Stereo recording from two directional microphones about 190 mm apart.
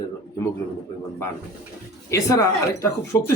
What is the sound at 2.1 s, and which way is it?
A man's voice, 15° left (ahead or behind).